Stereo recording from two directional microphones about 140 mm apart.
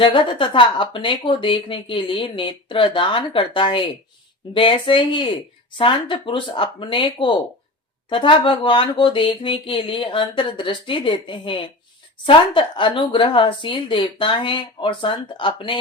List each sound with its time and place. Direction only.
0.0 s speech: 35° left (ahead or behind)